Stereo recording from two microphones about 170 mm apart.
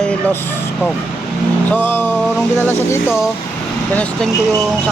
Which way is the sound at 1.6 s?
10° left (ahead or behind).